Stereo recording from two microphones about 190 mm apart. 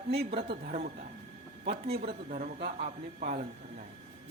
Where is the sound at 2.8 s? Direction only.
35° right (ahead or behind).